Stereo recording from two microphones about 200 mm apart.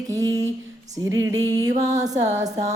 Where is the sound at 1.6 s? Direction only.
20° right (ahead or behind).